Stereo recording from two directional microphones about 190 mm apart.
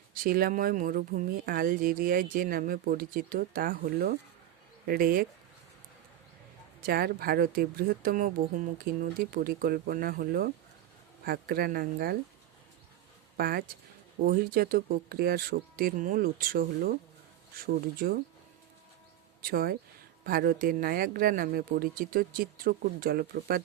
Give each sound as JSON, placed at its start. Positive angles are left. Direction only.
{"t": 0.1, "sound": "speech", "side_deg": -50}
{"t": 6.8, "sound": "speech", "side_deg": -55}
{"t": 13.3, "sound": "speech", "side_deg": -55}
{"t": 19.4, "sound": "speech", "side_deg": -50}